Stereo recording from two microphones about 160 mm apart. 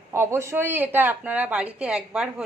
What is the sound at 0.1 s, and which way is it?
Speech, 15° right (ahead or behind).